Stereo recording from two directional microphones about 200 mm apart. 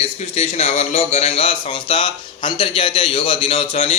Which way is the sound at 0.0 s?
30° left (ahead or behind).